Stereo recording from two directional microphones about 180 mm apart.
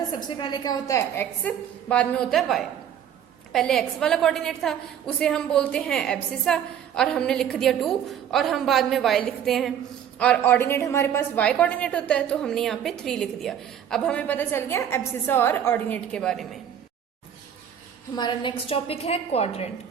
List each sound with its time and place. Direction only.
0.3 s a woman's voice: 25° left (ahead or behind); by 16.6 s centre (ahead or behind)
18.2 s a woman's voice: 25° left (ahead or behind)